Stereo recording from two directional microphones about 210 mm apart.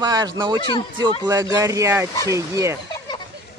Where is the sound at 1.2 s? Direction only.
15° right (ahead or behind).